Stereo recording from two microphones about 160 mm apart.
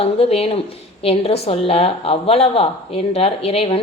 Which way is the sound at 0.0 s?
40° left (ahead or behind).